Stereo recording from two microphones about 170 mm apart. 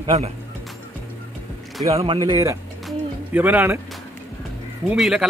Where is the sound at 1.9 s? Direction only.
35° right (ahead or behind).